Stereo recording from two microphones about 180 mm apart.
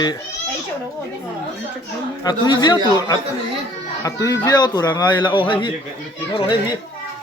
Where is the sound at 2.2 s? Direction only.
25° left (ahead or behind).